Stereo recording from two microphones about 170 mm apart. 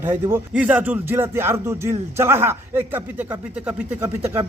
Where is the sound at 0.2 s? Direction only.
15° right (ahead or behind).